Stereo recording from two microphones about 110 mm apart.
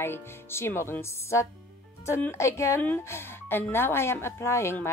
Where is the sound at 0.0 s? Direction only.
20° left (ahead or behind).